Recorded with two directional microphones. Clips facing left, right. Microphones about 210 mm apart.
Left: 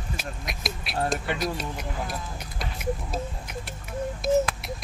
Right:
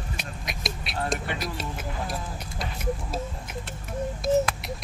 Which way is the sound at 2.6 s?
Centre (ahead or behind).